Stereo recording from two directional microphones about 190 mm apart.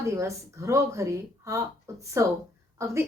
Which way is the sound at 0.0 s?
15° right (ahead or behind).